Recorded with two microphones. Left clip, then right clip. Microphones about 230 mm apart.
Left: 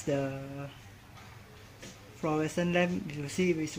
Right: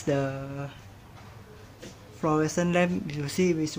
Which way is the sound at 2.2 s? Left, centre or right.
Centre.